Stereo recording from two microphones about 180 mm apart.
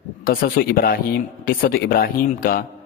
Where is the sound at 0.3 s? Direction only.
55° left (ahead or behind).